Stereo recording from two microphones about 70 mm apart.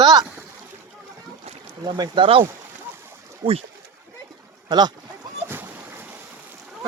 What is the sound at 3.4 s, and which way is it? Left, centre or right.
Speech, right.